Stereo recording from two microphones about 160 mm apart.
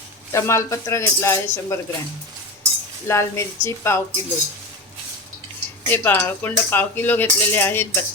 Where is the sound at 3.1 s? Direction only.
15° left (ahead or behind).